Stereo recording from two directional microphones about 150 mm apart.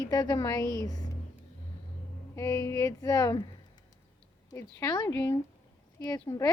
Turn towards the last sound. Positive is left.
turn(degrees=25)  # may be behind; listen again after turning